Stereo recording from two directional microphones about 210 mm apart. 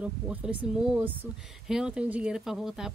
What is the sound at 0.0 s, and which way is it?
A woman's voice, 5° right (ahead or behind).